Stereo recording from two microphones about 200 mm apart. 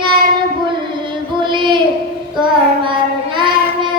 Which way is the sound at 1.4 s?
25° right (ahead or behind).